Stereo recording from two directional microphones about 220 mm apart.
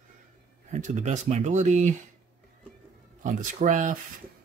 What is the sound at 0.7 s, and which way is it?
Speech, 35° right (ahead or behind).